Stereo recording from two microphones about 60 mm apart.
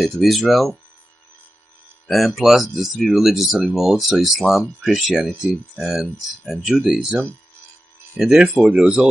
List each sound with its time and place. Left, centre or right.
0.0 s speech: centre
2.0 s speech: centre
8.2 s speech: centre